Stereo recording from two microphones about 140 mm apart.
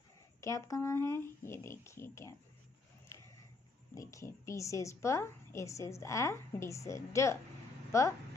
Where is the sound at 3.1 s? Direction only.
20° left (ahead or behind).